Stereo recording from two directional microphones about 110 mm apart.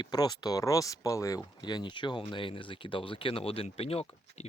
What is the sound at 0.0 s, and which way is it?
Speech, 40° left (ahead or behind).